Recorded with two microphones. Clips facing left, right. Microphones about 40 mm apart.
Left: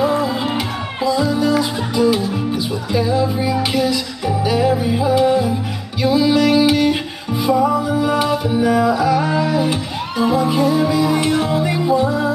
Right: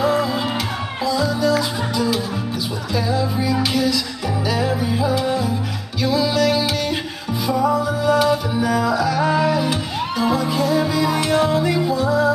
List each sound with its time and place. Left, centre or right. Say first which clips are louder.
1.0 s music: left 3 dB; centre
4.5 s music: left 5 dB; centre
11.6 s music: left 3 dB; centre